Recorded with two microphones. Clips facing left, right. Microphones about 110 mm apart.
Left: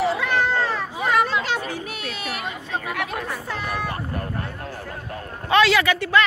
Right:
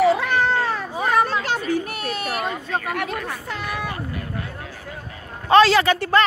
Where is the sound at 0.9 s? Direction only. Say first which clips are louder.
Right 1 dB; 40° right (ahead or behind).